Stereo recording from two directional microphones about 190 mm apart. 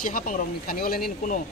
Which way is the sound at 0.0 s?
45° left (ahead or behind).